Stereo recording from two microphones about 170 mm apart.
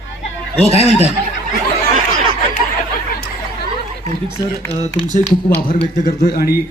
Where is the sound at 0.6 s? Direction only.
35° left (ahead or behind).